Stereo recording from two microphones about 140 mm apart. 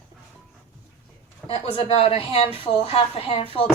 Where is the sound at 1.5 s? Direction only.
45° left (ahead or behind).